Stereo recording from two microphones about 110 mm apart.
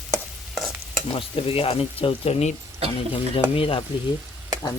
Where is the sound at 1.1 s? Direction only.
60° left (ahead or behind).